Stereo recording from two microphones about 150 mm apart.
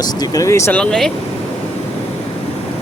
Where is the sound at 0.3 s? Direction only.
20° left (ahead or behind).